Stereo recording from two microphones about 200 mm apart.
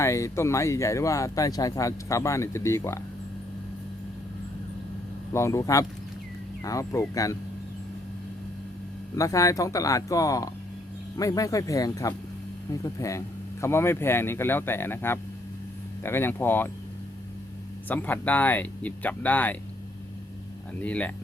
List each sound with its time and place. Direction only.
0.0 s speech: 15° left (ahead or behind)
5.3 s speech: 15° left (ahead or behind)
9.1 s speech: 15° left (ahead or behind)
17.8 s speech: 10° left (ahead or behind)
20.8 s speech: 5° left (ahead or behind)